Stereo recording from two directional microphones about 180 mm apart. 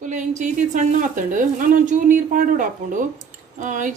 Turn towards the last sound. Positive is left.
turn(degrees=-45)  # may be behind; listen again after turning